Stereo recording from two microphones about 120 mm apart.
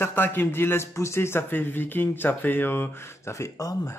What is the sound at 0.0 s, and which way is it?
A man's voice, 15° left (ahead or behind).